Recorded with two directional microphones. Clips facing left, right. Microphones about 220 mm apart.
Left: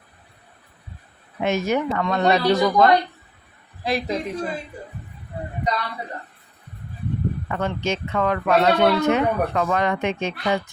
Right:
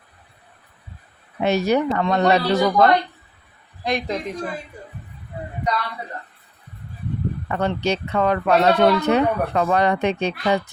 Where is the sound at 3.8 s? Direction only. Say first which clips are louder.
Even; 5° left (ahead or behind).